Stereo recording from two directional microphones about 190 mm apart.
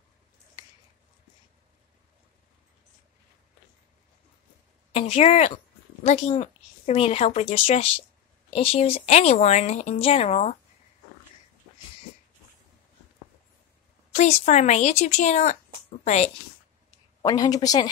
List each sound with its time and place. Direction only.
4.9 s speech: 35° left (ahead or behind)
14.1 s a woman's voice: 35° left (ahead or behind)
17.2 s speech: 20° left (ahead or behind)